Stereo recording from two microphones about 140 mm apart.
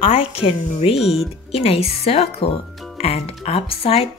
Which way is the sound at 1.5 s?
45° left (ahead or behind).